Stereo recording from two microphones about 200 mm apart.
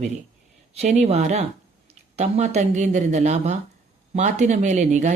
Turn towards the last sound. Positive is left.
turn(degrees=-35)  # may be behind; listen again after turning